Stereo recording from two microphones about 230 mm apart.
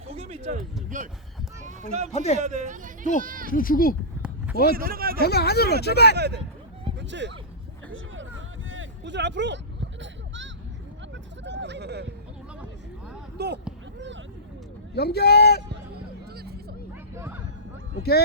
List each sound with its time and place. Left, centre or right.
0.1 s speech: right
1.6 s run: right
2.1 s speech: left
2.4 s speech: right
3.5 s speech: left
4.7 s speech: right
5.2 s speech: left
6.1 s speech: right
7.9 s vehicle: right
8.7 s a sound: right
13.4 s speech: right
14.9 s speech: left
16.3 s vehicle: right
17.2 s a sound: centre